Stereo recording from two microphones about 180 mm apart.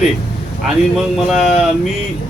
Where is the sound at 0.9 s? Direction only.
Centre (ahead or behind).